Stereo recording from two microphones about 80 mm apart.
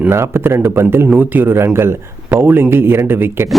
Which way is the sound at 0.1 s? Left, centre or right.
Right.